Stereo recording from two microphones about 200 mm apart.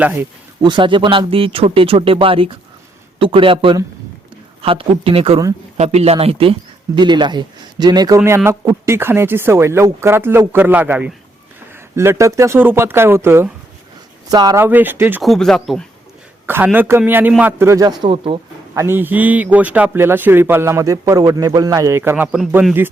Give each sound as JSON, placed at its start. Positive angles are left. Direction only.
{"t": 0.0, "sound": "a man's voice", "side_deg": -10}
{"t": 0.6, "sound": "a man's voice", "side_deg": -25}
{"t": 16.5, "sound": "a man's voice", "side_deg": -10}
{"t": 18.0, "sound": "speech", "side_deg": -25}
{"t": 18.7, "sound": "a man's voice", "side_deg": -15}